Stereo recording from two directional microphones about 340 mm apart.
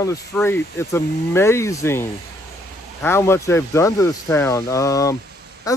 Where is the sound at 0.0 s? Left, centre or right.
Centre.